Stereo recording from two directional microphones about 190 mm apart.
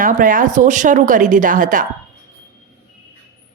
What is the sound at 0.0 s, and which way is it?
Speech, 45° right (ahead or behind).